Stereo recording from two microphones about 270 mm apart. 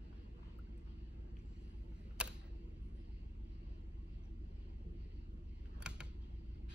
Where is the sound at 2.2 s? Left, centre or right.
Centre.